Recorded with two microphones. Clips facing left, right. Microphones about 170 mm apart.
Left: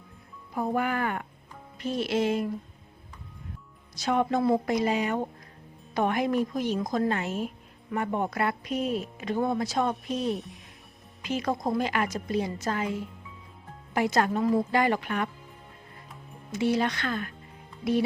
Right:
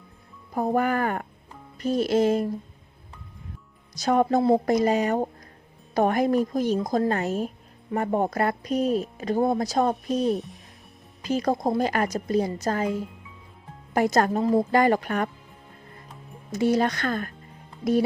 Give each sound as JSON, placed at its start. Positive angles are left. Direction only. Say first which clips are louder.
{"t": 0.5, "sound": "speech", "louder": "right 4 dB", "side_deg": -40}
{"t": 3.9, "sound": "speech", "louder": "right 4 dB", "side_deg": -40}
{"t": 10.3, "sound": "speech", "louder": "right 5 dB", "side_deg": 0}
{"t": 11.2, "sound": "speech", "louder": "right 5 dB", "side_deg": -35}
{"t": 16.5, "sound": "speech", "louder": "right 4 dB", "side_deg": -40}